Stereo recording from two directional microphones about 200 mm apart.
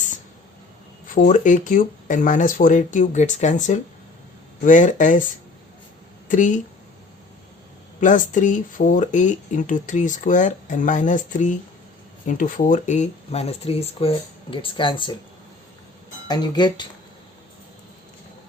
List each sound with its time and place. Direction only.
1.0 s speech: 40° left (ahead or behind)
6.2 s speech: 40° left (ahead or behind)
8.0 s speech: 40° left (ahead or behind); by 15.1 s 25° left (ahead or behind)
16.3 s speech: 20° left (ahead or behind)